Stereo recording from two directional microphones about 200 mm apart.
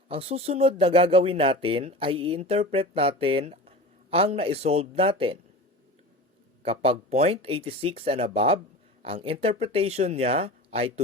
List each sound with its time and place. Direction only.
0.1 s speech: 30° right (ahead or behind)
6.6 s speech: 30° right (ahead or behind)